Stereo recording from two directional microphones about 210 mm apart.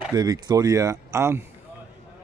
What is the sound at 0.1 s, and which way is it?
Speech, 20° right (ahead or behind).